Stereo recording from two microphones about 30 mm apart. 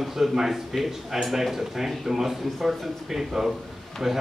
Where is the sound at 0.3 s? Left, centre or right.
Centre.